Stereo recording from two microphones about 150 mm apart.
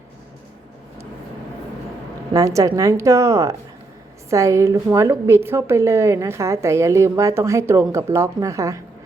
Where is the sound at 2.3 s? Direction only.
20° right (ahead or behind).